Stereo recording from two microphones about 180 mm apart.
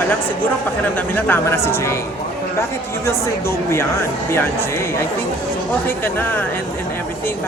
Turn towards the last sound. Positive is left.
turn(degrees=10)  # may be behind; listen again after turning